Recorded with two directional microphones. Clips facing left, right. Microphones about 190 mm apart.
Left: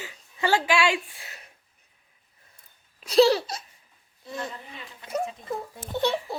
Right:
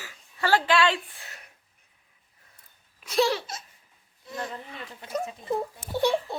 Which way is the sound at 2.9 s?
35° left (ahead or behind).